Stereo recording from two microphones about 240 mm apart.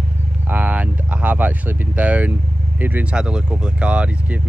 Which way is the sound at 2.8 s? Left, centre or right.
Centre.